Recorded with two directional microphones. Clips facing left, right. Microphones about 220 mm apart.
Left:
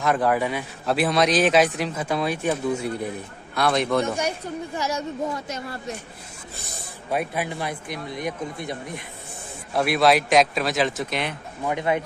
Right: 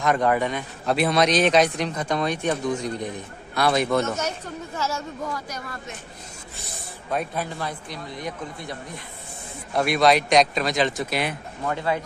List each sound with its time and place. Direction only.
0.0 s a man's voice: centre (ahead or behind)
4.0 s speech: 10° left (ahead or behind)
7.1 s speech: 10° left (ahead or behind)
9.8 s a man's voice: 5° left (ahead or behind)
11.6 s speech: 20° left (ahead or behind)